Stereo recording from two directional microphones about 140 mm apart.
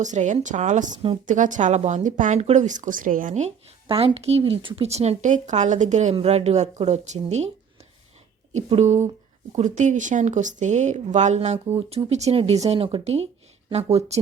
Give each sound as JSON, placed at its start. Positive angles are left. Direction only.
{"t": 0.0, "sound": "speech", "side_deg": -60}
{"t": 3.8, "sound": "speech", "side_deg": -40}
{"t": 8.5, "sound": "speech", "side_deg": -55}